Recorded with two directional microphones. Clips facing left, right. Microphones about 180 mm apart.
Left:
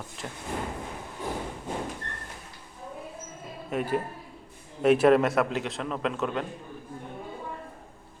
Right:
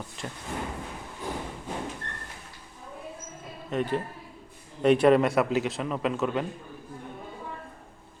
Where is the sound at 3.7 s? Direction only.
10° left (ahead or behind).